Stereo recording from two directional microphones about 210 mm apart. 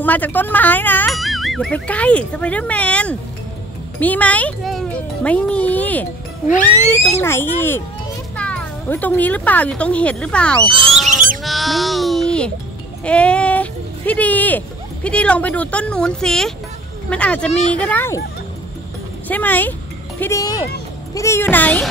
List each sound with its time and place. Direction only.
0.0 s speech: 10° left (ahead or behind)
7.2 s speech: 10° left (ahead or behind)
10.9 s goose: centre (ahead or behind)
11.4 s speech: centre (ahead or behind)
19.2 s speech: 10° left (ahead or behind)